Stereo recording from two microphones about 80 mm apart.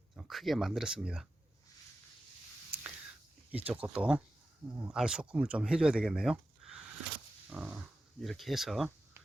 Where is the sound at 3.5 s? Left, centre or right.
Centre.